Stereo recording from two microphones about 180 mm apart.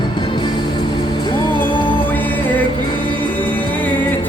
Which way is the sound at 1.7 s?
30° left (ahead or behind).